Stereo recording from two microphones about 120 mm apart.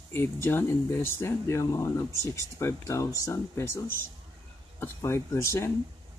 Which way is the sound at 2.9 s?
25° left (ahead or behind).